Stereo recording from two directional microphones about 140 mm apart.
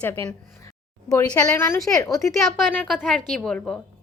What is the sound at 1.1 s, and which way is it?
A woman's voice, 25° left (ahead or behind).